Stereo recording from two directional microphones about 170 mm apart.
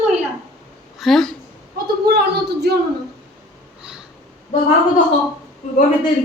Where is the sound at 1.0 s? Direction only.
Centre (ahead or behind).